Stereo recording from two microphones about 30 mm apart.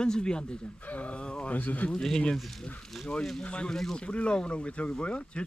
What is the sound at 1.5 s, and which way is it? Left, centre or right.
Speech, left.